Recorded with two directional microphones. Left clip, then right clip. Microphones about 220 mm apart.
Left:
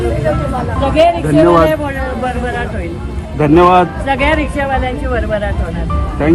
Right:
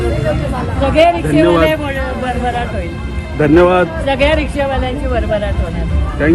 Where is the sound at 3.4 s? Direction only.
25° left (ahead or behind).